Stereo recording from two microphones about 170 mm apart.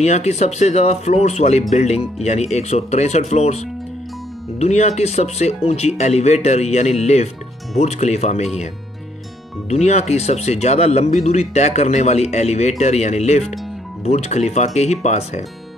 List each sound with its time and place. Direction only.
0.0 s speech: 40° left (ahead or behind)
9.7 s speech: 40° left (ahead or behind)